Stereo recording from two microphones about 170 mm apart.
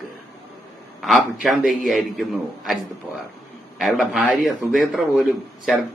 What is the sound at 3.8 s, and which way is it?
A man's voice, centre (ahead or behind).